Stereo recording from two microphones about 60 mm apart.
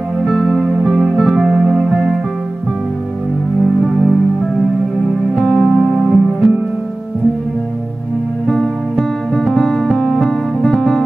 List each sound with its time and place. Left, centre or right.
0.2 s music: centre
3.6 s music: centre
5.4 s music: centre
8.5 s music: centre